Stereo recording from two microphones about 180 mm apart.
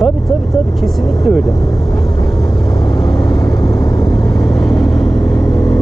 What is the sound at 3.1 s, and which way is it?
Vehicle, 25° left (ahead or behind).